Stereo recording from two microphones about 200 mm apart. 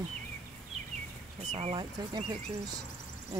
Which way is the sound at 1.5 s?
25° right (ahead or behind).